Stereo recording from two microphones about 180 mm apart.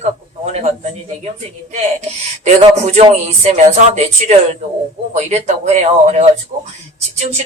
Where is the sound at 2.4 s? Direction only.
40° right (ahead or behind).